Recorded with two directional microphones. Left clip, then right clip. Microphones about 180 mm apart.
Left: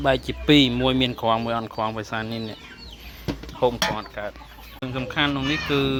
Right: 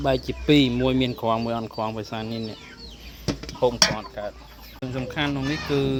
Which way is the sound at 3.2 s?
Centre (ahead or behind).